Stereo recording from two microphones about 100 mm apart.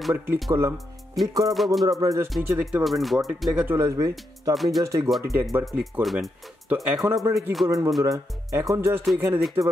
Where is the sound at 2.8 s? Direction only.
Centre (ahead or behind).